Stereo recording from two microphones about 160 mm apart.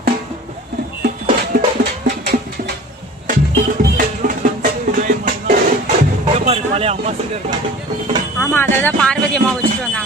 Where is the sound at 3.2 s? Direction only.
55° right (ahead or behind).